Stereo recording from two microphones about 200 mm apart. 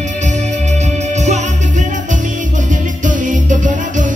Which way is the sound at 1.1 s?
35° right (ahead or behind).